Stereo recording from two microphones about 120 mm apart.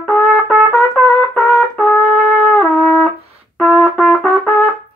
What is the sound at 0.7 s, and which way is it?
Trumpet, 5° left (ahead or behind).